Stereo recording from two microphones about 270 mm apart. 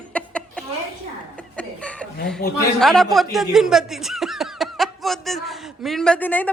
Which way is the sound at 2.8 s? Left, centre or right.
Centre.